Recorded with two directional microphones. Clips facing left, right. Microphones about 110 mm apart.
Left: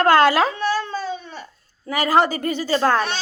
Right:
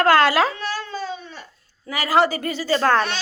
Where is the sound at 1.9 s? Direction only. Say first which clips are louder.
Left 1 dB; 20° left (ahead or behind).